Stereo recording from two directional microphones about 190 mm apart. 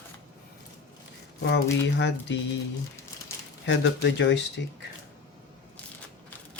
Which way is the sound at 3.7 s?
70° left (ahead or behind).